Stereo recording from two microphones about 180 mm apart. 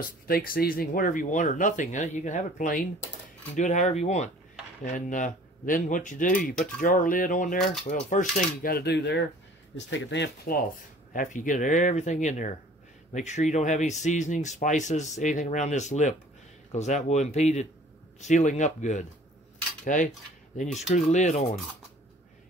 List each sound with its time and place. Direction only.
0.3 s speech: 55° left (ahead or behind); by 9.3 s 75° left (ahead or behind)
9.8 s speech: 90° left; by 10.6 s 65° left (ahead or behind)
11.1 s speech: 45° left (ahead or behind)
19.8 s cutlery: 45° left (ahead or behind)
20.9 s speech: 40° left (ahead or behind)